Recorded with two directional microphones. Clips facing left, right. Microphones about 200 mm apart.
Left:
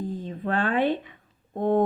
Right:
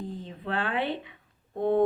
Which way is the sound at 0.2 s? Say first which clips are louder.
Left 5 dB; 45° left (ahead or behind).